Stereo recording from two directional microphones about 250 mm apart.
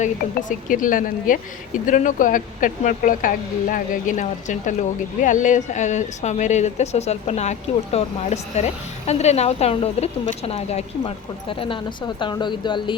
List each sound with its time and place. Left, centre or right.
0.0 s a woman's voice: left